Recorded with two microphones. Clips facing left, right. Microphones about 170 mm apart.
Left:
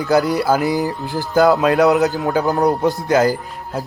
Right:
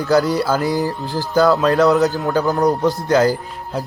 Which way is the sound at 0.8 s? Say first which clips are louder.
Even; 20° left (ahead or behind).